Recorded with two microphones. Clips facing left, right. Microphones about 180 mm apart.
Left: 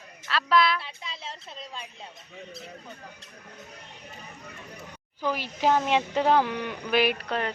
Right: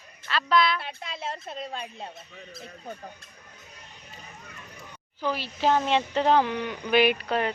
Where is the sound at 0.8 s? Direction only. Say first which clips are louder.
Right 5 dB; 55° right (ahead or behind).